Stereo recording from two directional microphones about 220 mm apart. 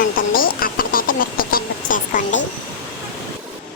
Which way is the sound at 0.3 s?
40° left (ahead or behind).